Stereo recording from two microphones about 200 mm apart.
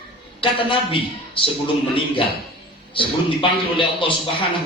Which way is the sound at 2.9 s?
25° left (ahead or behind).